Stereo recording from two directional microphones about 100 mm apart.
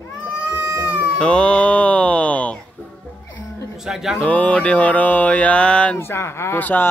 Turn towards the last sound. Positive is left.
turn(degrees=20)  # may be behind; listen again after turning